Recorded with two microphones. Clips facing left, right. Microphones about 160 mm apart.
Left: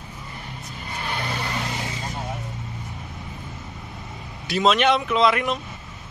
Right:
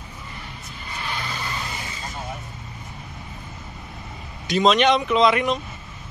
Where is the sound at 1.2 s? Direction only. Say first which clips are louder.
Left 3 dB; 60° left (ahead or behind); by 2.0 s 75° left (ahead or behind).